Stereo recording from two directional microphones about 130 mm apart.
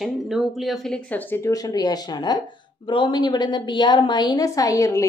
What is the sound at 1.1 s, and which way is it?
A woman's voice, 15° left (ahead or behind).